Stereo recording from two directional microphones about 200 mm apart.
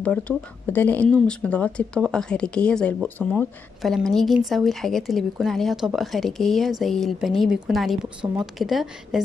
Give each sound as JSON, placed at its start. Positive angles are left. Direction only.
{"t": 0.7, "sound": "speech", "side_deg": 10}